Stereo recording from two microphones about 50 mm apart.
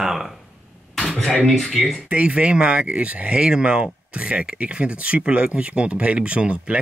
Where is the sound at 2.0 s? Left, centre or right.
Right.